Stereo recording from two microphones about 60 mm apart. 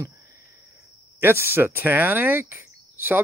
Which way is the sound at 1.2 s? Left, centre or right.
Right.